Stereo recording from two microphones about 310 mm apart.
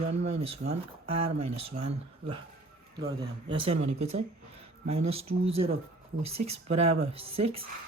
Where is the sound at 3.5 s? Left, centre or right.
Centre.